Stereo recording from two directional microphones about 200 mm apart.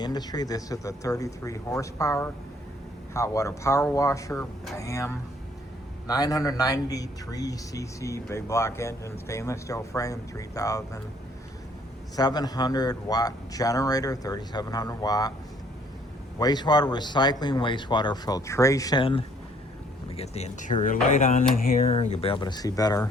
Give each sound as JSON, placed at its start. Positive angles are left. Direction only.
{"t": 0.0, "sound": "speech", "side_deg": 20}
{"t": 12.1, "sound": "speech", "side_deg": 20}
{"t": 16.4, "sound": "speech", "side_deg": 20}
{"t": 21.8, "sound": "speech", "side_deg": 30}